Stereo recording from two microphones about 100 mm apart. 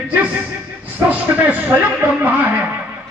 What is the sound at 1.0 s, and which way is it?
Music, 15° right (ahead or behind).